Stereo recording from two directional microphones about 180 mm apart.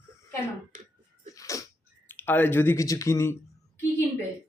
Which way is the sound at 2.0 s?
10° left (ahead or behind).